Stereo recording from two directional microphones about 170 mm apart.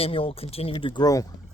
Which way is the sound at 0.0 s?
35° left (ahead or behind).